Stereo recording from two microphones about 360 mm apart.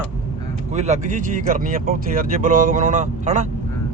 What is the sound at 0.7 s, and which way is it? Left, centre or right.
Speech, centre.